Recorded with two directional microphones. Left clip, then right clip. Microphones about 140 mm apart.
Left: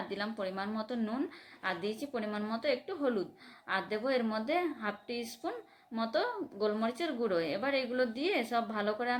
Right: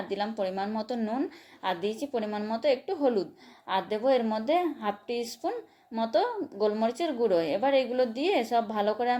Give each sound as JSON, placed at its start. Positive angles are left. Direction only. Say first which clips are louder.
{"t": 0.1, "sound": "a woman's voice", "louder": "right 7 dB", "side_deg": -15}